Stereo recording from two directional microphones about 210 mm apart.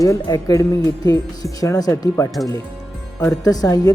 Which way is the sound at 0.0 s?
15° left (ahead or behind).